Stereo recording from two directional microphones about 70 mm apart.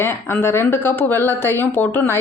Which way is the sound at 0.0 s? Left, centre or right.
Left.